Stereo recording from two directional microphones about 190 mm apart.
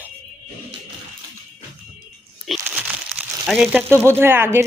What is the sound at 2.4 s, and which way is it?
Crumpling, 5° right (ahead or behind).